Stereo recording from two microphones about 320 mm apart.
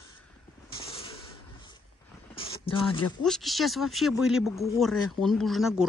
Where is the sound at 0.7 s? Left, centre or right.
Centre.